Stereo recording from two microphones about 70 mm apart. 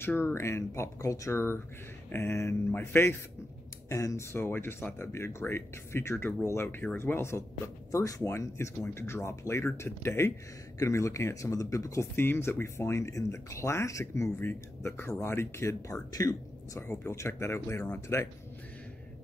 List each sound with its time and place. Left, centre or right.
0.0 s speech: left
1.3 s speech: left
3.9 s speech: left
10.8 s speech: left
12.2 s speech: left
14.4 s speech: left
15.9 s speech: left
17.0 s speech: left